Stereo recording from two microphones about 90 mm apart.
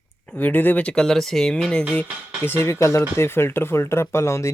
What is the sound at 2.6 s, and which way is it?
Speech, 30° left (ahead or behind).